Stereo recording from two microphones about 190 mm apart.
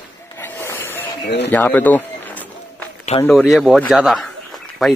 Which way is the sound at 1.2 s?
65° left (ahead or behind).